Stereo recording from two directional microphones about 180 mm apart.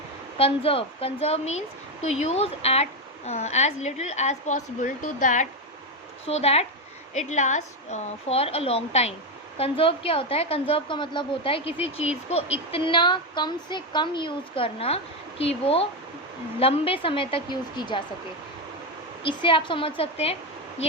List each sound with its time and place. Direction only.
0.3 s a woman's voice: 30° left (ahead or behind)
19.2 s a woman's voice: 30° left (ahead or behind)